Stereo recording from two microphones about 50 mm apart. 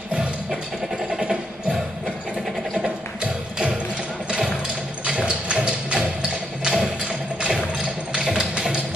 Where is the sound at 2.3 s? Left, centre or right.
Centre.